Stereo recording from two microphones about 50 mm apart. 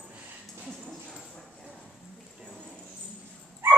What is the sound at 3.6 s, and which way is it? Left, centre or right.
Dog, right.